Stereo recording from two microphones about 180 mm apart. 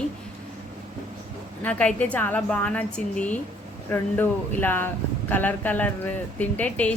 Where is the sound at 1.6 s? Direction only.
5° left (ahead or behind).